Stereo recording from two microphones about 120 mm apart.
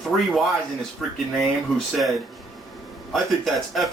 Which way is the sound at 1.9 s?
Centre (ahead or behind).